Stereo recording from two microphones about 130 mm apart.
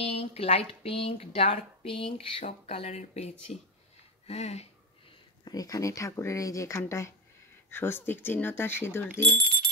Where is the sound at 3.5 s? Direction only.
60° left (ahead or behind).